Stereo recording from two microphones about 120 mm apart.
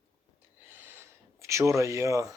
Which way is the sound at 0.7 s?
20° right (ahead or behind).